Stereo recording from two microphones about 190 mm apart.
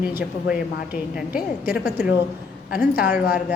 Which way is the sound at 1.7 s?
5° right (ahead or behind).